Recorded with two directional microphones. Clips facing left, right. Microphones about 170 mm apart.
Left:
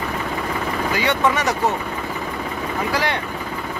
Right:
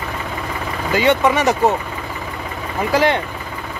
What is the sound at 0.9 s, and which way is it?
Speech, 20° right (ahead or behind).